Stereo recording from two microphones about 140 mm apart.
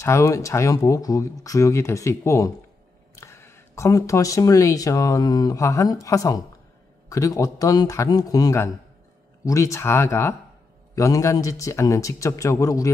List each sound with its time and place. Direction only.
0.0 s speech: 20° left (ahead or behind)